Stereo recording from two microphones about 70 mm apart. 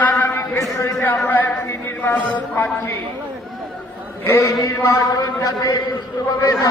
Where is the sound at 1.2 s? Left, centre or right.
Left.